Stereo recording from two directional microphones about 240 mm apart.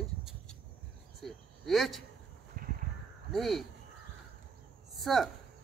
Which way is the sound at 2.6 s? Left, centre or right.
Right.